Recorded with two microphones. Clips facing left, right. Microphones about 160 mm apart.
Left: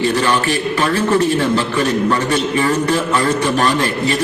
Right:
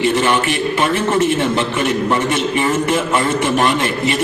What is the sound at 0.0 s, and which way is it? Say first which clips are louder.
A man's voice: right 1 dB; 20° right (ahead or behind).